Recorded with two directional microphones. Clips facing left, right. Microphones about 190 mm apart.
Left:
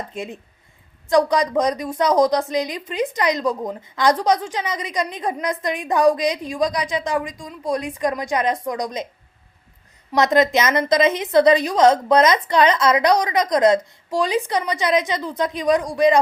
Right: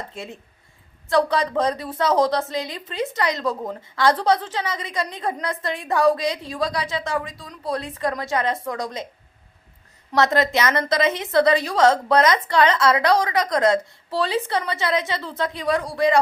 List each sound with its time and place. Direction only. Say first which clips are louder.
0.1 s a woman's voice: left 5 dB; 15° left (ahead or behind)
10.1 s a woman's voice: left 3 dB; 15° left (ahead or behind)